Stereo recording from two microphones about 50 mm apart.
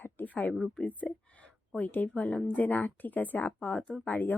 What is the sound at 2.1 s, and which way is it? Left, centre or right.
A woman's voice, left.